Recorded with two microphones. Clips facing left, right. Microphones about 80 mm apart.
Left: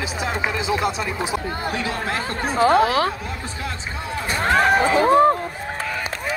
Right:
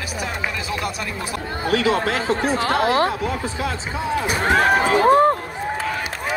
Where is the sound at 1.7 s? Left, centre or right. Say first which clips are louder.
Right 9 dB; right.